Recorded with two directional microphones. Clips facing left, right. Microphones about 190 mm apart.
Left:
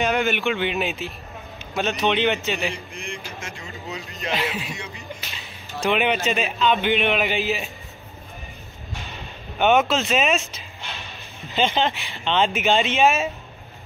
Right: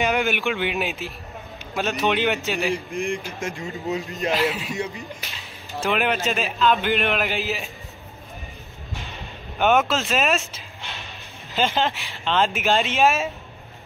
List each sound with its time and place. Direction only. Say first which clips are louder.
0.1 s a man's voice: left 1 dB; 5° right (ahead or behind)
2.9 s speech: right 8 dB; 50° right (ahead or behind)
4.3 s a man's voice: right 3 dB; centre (ahead or behind)
5.9 s a man's voice: left 2 dB; centre (ahead or behind)
9.6 s a man's voice: left 1 dB; centre (ahead or behind)
11.5 s a man's voice: left 1 dB; 5° right (ahead or behind)